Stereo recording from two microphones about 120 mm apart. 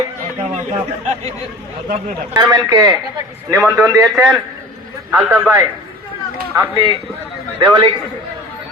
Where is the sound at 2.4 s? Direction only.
35° right (ahead or behind).